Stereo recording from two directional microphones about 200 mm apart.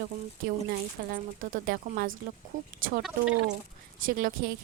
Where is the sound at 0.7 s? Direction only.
45° right (ahead or behind).